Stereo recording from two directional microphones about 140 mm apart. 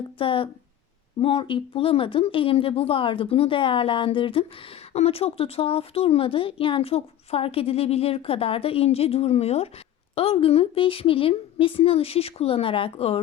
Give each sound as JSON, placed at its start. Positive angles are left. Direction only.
{"t": 0.2, "sound": "speech", "side_deg": 40}